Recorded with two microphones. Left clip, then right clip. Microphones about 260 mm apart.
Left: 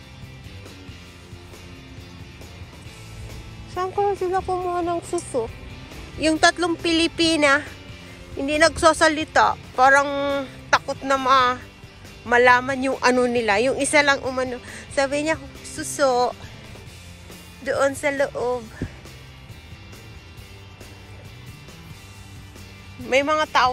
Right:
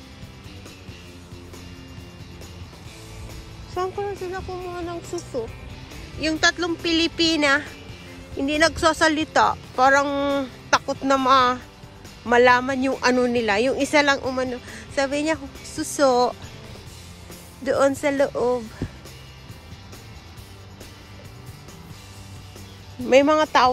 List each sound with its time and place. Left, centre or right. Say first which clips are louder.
3.9 s a child's voice: left 7 dB; centre
15.7 s a child's voice: right 1 dB; centre
17.9 s a child's voice: right 1 dB; centre
23.0 s a child's voice: right 4 dB; centre
23.3 s speech: right 1 dB; right